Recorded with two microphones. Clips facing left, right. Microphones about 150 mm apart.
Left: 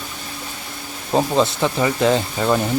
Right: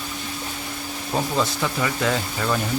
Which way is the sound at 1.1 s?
30° left (ahead or behind).